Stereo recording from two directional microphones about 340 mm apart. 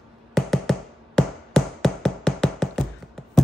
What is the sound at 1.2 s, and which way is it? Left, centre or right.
Tap, centre.